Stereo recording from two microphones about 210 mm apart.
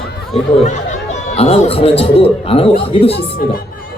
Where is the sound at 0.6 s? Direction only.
35° left (ahead or behind).